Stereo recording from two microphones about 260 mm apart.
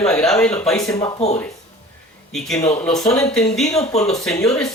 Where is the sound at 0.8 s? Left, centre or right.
Centre.